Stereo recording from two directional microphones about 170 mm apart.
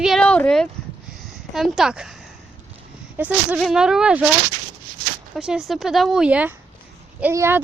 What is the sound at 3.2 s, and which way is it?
A woman's voice, 10° right (ahead or behind).